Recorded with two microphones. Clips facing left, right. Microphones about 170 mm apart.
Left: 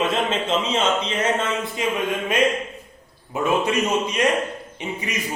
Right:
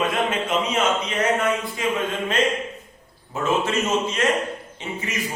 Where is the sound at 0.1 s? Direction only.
25° left (ahead or behind).